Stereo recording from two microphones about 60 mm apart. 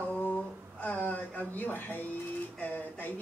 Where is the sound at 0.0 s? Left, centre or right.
Left.